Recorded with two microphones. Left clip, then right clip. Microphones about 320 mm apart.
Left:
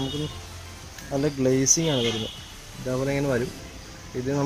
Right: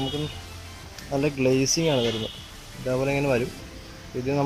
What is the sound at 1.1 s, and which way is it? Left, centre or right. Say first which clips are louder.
Speech: right 1 dB; centre.